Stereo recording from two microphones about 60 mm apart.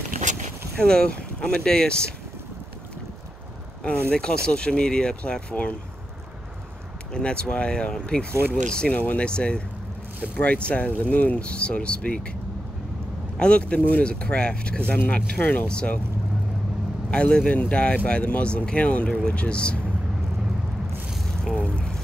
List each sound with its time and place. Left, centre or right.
0.7 s speech: centre
4.1 s speech: centre
7.1 s speech: centre
8.3 s speech: right
8.6 s speech: centre
8.9 s speech: left
9.2 s speech: centre
13.4 s speech: centre
17.1 s speech: centre
21.1 s a sound: centre
21.5 s speech: centre